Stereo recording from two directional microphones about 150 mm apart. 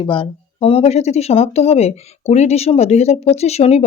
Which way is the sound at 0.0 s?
35° left (ahead or behind).